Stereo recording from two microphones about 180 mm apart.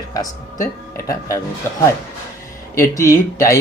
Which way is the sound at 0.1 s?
20° left (ahead or behind).